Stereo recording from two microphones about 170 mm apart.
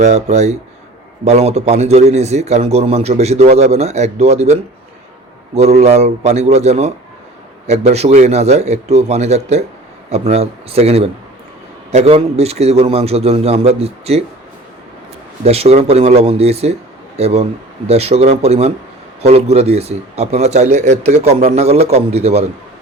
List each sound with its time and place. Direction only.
0.0 s a man's voice: 40° right (ahead or behind)
15.4 s a man's voice: 35° right (ahead or behind)